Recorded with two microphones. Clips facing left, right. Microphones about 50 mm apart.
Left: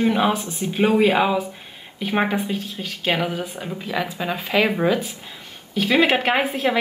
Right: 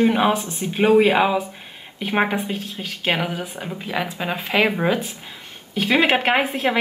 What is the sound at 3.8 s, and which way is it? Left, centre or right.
Speech, right.